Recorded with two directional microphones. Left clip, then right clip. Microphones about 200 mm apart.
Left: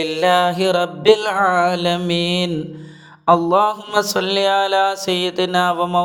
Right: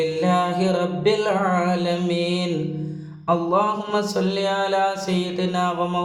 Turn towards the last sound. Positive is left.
turn(degrees=40)  # may be behind; listen again after turning